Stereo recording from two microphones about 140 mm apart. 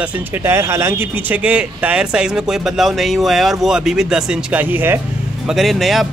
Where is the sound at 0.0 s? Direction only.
10° right (ahead or behind).